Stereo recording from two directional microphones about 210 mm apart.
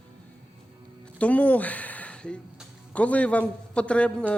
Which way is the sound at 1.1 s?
5° left (ahead or behind).